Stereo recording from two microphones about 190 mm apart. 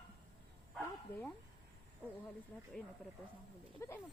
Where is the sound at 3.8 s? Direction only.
15° left (ahead or behind).